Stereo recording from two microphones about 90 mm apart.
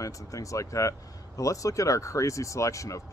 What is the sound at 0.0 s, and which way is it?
Speech, 35° left (ahead or behind).